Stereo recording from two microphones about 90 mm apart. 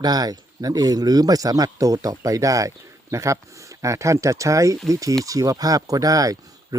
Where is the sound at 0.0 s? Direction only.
45° right (ahead or behind).